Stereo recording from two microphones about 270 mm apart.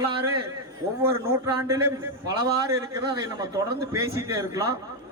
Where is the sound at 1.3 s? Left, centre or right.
Centre.